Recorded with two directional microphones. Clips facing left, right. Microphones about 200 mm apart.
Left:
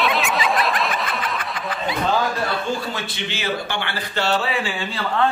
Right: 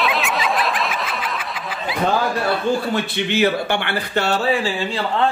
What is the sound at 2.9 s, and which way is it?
Speech, 60° right (ahead or behind).